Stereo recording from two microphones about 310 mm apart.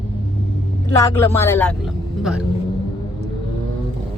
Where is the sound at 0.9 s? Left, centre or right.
Centre.